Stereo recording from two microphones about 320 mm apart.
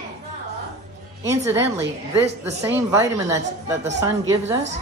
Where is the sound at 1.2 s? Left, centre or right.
Centre.